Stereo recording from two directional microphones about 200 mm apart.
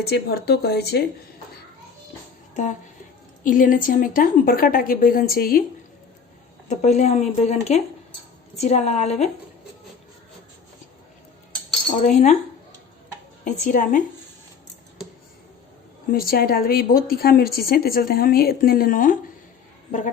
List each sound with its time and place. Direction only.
0.0 s a woman's voice: 55° left (ahead or behind)
3.4 s a woman's voice: 45° left (ahead or behind)
6.7 s speech: 35° left (ahead or behind)
12.0 s speech: 35° left (ahead or behind)
13.4 s speech: 40° left (ahead or behind)
16.1 s a woman's voice: 50° left (ahead or behind)